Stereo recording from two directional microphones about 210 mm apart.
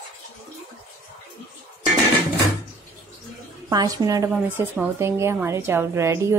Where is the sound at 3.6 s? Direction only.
15° right (ahead or behind).